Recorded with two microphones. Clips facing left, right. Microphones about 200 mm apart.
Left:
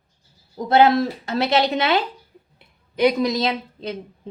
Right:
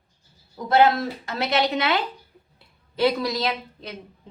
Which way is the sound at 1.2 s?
30° left (ahead or behind).